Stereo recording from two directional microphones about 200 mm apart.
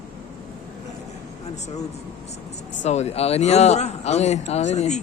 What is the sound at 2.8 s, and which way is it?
Speech, 35° left (ahead or behind).